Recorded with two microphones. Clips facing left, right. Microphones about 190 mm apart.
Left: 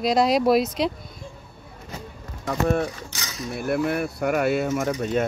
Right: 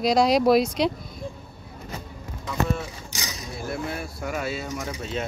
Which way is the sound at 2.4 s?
55° left (ahead or behind).